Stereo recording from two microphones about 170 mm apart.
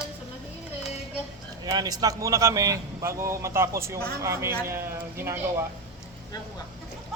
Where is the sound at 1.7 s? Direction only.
25° right (ahead or behind).